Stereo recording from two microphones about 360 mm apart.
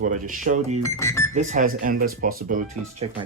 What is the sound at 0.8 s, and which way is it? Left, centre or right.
Speech, centre.